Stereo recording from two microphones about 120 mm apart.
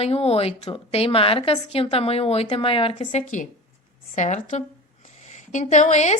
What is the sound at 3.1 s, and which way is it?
A woman's voice, 80° left.